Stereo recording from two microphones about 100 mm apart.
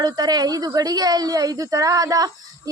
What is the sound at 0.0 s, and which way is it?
A woman's voice, 45° right (ahead or behind).